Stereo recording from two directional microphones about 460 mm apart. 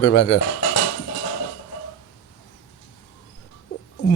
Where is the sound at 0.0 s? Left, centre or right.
Left.